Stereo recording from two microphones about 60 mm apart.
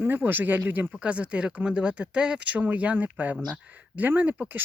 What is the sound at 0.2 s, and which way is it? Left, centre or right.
Speech, right.